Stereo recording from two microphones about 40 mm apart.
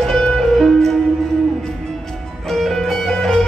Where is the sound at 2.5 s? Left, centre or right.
Centre.